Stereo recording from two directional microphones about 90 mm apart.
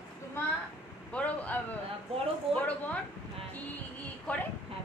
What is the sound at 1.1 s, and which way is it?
A man's voice, 15° left (ahead or behind).